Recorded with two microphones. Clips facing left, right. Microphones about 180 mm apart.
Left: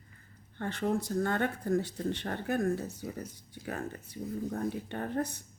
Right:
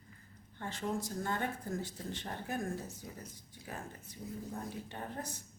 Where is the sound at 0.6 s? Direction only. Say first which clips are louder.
Left 6 dB; 65° left (ahead or behind).